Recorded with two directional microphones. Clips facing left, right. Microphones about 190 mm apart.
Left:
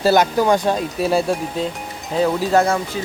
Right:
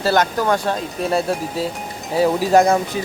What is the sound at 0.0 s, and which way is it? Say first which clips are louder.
Speech: left 3 dB; 10° left (ahead or behind).